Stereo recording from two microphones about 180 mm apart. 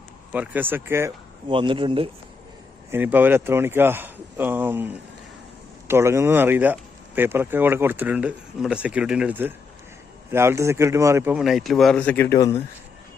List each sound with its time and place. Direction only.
0.3 s speech: 10° right (ahead or behind)
1.5 s speech: 30° right (ahead or behind)
2.9 s speech: 10° right (ahead or behind)
5.9 s speech: 15° right (ahead or behind); by 12.6 s 15° left (ahead or behind)